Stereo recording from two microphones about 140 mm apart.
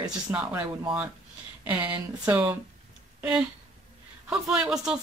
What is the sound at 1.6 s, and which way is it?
Speech, 10° right (ahead or behind).